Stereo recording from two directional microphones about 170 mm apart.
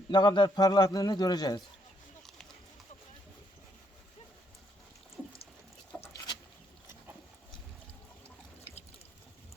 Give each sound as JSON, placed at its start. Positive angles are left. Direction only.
{"t": 0.1, "sound": "a man's voice", "side_deg": 25}
{"t": 5.9, "sound": "patter", "side_deg": 10}